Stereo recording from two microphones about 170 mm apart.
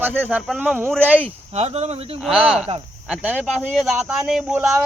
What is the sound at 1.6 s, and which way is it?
Speech, 40° right (ahead or behind).